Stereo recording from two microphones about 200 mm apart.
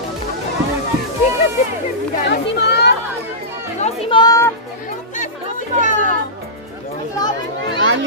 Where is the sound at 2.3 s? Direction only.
55° left (ahead or behind).